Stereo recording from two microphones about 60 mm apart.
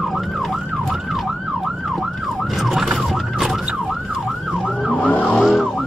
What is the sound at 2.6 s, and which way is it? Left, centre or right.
Emergency vehicle, centre.